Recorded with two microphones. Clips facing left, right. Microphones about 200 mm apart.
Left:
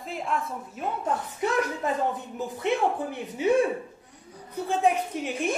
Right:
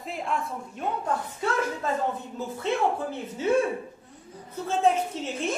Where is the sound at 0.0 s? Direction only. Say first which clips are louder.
Even; centre (ahead or behind).